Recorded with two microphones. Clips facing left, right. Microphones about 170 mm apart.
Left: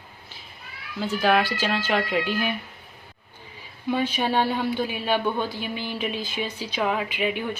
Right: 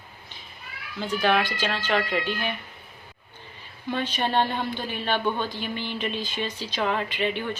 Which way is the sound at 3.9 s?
10° left (ahead or behind).